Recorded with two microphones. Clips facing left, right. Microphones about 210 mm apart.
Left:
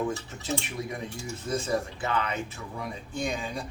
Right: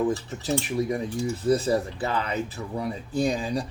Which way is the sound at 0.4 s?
35° right (ahead or behind).